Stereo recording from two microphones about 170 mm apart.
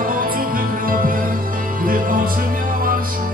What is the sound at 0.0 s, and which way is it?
Music, 55° right (ahead or behind).